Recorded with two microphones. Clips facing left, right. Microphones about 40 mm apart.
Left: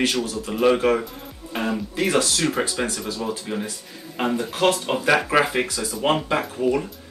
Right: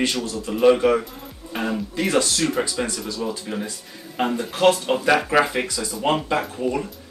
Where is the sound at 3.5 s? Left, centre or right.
Centre.